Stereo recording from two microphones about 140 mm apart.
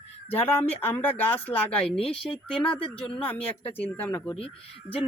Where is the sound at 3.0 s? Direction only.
5° left (ahead or behind).